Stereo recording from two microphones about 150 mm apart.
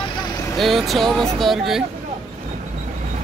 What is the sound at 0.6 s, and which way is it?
Speech, centre (ahead or behind).